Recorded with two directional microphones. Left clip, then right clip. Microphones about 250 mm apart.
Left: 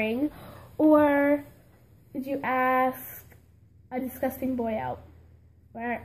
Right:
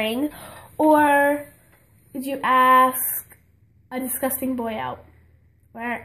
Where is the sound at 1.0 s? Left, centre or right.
Centre.